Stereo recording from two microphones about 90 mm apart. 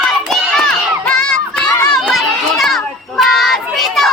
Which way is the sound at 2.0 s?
Centre (ahead or behind).